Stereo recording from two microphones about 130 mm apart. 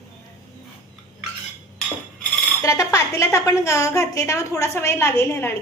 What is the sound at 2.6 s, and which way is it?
Speech, 25° left (ahead or behind).